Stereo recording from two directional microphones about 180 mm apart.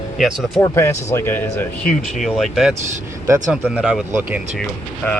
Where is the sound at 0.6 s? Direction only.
15° left (ahead or behind).